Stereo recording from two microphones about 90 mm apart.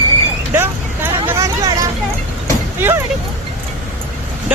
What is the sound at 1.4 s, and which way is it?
Vehicle, 40° right (ahead or behind).